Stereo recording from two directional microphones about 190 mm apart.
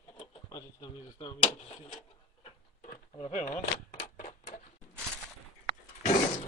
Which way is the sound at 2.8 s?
40° left (ahead or behind).